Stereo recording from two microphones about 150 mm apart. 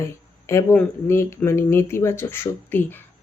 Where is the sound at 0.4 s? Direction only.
20° left (ahead or behind).